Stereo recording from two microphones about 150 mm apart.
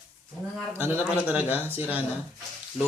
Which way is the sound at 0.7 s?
15° right (ahead or behind).